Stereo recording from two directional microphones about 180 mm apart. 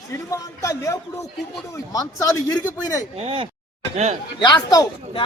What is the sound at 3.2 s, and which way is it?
Speech, 30° right (ahead or behind).